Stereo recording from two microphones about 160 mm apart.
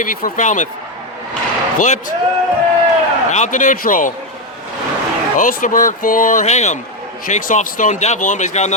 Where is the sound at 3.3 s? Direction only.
50° left (ahead or behind).